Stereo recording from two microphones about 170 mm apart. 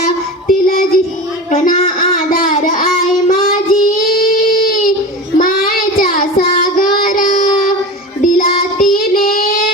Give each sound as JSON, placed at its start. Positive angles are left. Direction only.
{"t": 0.0, "sound": "child singing", "side_deg": 55}
{"t": 1.5, "sound": "speech", "side_deg": 50}
{"t": 2.0, "sound": "child singing", "side_deg": 55}